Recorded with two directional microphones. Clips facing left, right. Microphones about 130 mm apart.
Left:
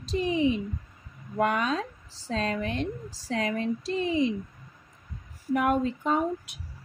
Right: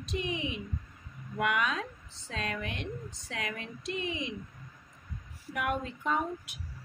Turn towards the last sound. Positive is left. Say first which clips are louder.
# left 7 dB
turn(degrees=35)  # may be behind; listen again after turning